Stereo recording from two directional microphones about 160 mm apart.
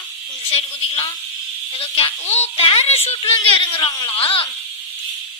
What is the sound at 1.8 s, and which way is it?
A woman's voice, 35° left (ahead or behind).